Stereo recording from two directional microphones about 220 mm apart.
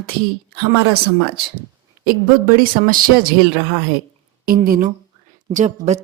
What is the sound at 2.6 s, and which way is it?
Speech, 40° right (ahead or behind).